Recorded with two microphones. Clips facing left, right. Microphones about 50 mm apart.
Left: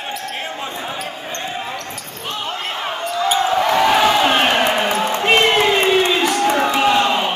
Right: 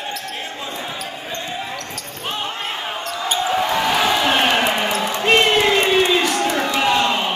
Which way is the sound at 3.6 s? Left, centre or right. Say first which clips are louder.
Left 4 dB; left.